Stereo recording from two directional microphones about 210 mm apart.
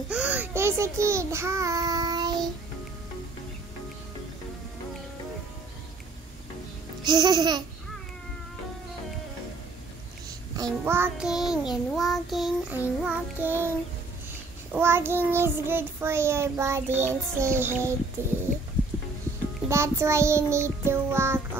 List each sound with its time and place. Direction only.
0.1 s a child's voice: 5° right (ahead or behind)
7.0 s babbling: 20° right (ahead or behind)
10.5 s child singing: 15° right (ahead or behind)
19.7 s child singing: 15° right (ahead or behind)